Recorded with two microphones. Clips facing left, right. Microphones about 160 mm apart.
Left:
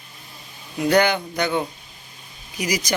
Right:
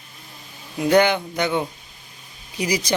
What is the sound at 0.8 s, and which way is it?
Speech, 20° right (ahead or behind).